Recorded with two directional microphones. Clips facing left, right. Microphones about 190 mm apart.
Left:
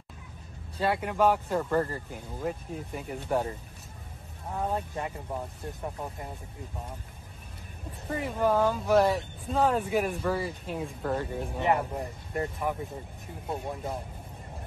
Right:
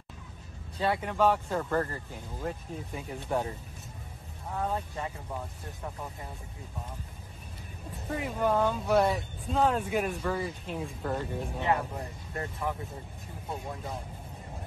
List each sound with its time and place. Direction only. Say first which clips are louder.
0.7 s speech: left 1 dB; 5° left (ahead or behind)
4.6 s speech: left 2 dB; 10° left (ahead or behind)
8.1 s speech: left 2 dB; centre (ahead or behind)
11.6 s speech: left 3 dB; 15° left (ahead or behind)